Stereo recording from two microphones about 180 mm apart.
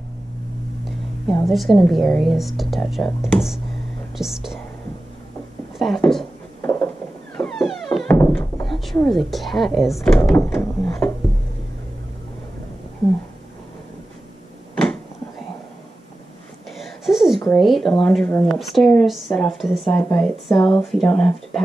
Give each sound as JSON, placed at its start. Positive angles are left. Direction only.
{"t": 0.8, "sound": "a woman's voice", "side_deg": 0}
{"t": 5.8, "sound": "a woman's voice", "side_deg": 0}
{"t": 6.6, "sound": "a sound", "side_deg": 15}
{"t": 7.3, "sound": "music", "side_deg": 5}
{"t": 8.1, "sound": "thunk", "side_deg": 10}
{"t": 8.6, "sound": "a woman's voice", "side_deg": 0}
{"t": 14.8, "sound": "a sound", "side_deg": 5}
{"t": 16.7, "sound": "a sound", "side_deg": 0}
{"t": 17.6, "sound": "a woman's voice", "side_deg": 0}
{"t": 20.0, "sound": "a woman's voice", "side_deg": 15}